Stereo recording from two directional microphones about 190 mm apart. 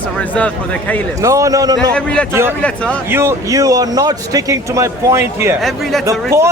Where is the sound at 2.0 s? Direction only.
5° left (ahead or behind).